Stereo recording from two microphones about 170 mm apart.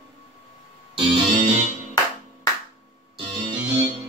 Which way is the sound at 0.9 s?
30° right (ahead or behind).